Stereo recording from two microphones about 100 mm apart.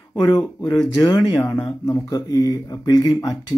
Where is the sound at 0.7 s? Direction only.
40° left (ahead or behind).